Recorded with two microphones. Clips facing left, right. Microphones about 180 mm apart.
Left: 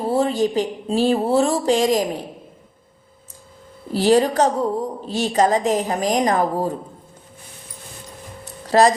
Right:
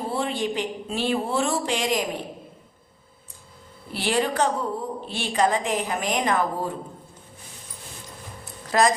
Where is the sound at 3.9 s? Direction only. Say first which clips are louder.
Left 8 dB; 40° left (ahead or behind).